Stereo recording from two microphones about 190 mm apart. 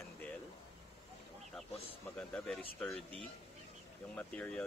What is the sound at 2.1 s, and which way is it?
Speech, 5° left (ahead or behind).